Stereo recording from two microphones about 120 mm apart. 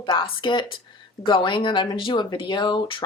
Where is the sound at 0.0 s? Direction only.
40° left (ahead or behind).